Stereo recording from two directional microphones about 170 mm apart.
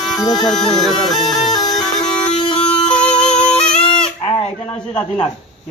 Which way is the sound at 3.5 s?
5° left (ahead or behind).